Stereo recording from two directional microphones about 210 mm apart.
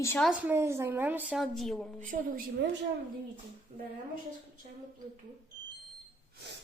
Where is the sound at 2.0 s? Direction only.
35° right (ahead or behind).